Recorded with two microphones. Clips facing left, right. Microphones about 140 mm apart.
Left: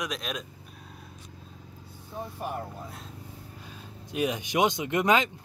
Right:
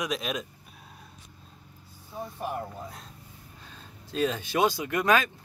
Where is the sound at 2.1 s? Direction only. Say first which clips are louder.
Even; centre (ahead or behind).